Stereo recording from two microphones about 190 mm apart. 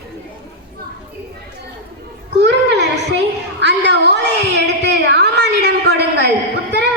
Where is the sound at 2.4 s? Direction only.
65° right (ahead or behind).